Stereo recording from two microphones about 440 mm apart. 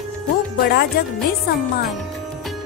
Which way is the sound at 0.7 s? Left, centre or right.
Left.